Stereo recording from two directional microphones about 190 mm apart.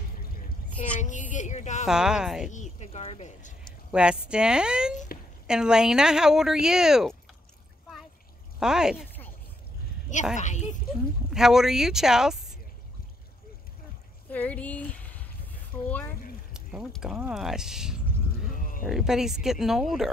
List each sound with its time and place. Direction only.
1.0 s speech: 40° left (ahead or behind)
1.9 s speech: 5° right (ahead or behind)
2.5 s speech: 35° left (ahead or behind)
3.9 s speech: 5° right (ahead or behind)
4.9 s speech: 45° left (ahead or behind)
5.5 s speech: 5° right (ahead or behind)
8.5 s speech: 5° right (ahead or behind)
10.3 s speech: 40° left (ahead or behind)
11.2 s speech: centre (ahead or behind)
14.3 s speech: 10° left (ahead or behind)
16.5 s speech: 5° right (ahead or behind)
18.5 s a sound: 45° left (ahead or behind)
18.9 s speech: centre (ahead or behind)